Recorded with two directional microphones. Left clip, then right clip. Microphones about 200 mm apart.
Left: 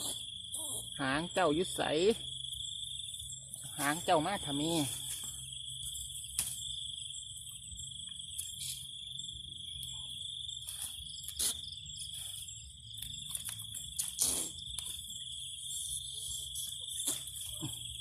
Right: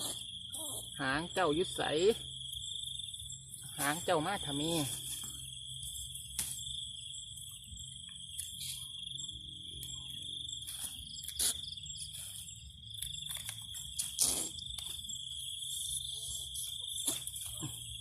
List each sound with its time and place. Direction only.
0.9 s speech: 40° left (ahead or behind)
3.8 s speech: 35° left (ahead or behind)
14.2 s a sound: 10° right (ahead or behind)